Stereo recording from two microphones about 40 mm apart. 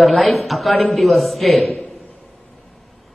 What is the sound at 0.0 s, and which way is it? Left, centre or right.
A man's voice, centre.